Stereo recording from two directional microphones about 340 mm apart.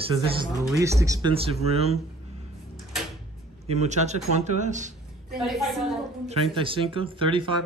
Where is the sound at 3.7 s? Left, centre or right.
Centre.